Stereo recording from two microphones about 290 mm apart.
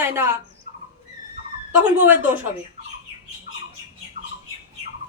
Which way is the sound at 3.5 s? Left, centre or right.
Right.